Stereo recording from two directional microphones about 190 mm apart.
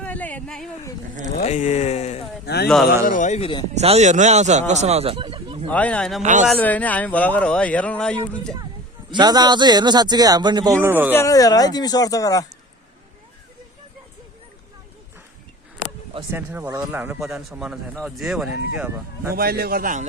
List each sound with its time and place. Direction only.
0.0 s a sound: 10° left (ahead or behind)
1.4 s speech: 35° left (ahead or behind)
2.5 s a man's voice: 60° left (ahead or behind)
3.1 s speech: 40° left (ahead or behind)
3.8 s a man's voice: 35° right (ahead or behind)
5.6 s speech: 10° left (ahead or behind)
6.2 s a man's voice: 40° right (ahead or behind)
6.5 s speech: 10° left (ahead or behind)
9.0 s speech: 20° right (ahead or behind)
11.1 s speech: 15° left (ahead or behind)
16.3 s speech: 10° right (ahead or behind)
17.0 s speech: 5° right (ahead or behind)
19.4 s a man's voice: 55° right (ahead or behind)